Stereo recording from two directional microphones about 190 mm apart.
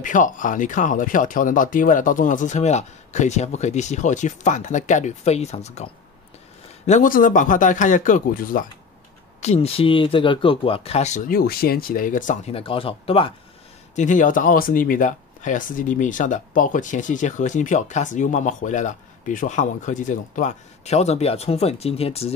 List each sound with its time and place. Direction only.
0.0 s speech: 45° left (ahead or behind)
6.9 s speech: 45° left (ahead or behind)
9.4 s speech: 35° left (ahead or behind)
13.9 s speech: 40° left (ahead or behind)